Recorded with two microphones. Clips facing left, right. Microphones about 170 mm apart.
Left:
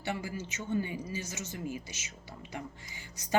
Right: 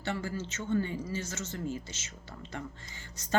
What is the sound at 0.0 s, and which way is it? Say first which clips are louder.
Speech: right 2 dB; 15° left (ahead or behind).